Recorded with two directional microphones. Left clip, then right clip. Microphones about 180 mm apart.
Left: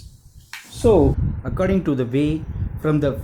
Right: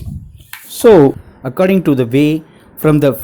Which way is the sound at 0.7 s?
50° right (ahead or behind).